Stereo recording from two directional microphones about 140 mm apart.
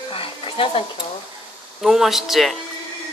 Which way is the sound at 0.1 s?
40° left (ahead or behind).